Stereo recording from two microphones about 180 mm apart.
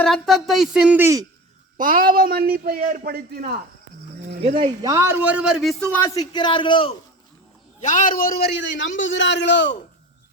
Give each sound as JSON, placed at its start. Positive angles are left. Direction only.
{"t": 0.0, "sound": "speech", "side_deg": 0}
{"t": 1.8, "sound": "a man's voice", "side_deg": -50}
{"t": 4.4, "sound": "speech", "side_deg": -35}
{"t": 4.8, "sound": "a man's voice", "side_deg": -15}
{"t": 6.1, "sound": "a man's voice", "side_deg": 25}
{"t": 7.8, "sound": "a man's voice", "side_deg": 45}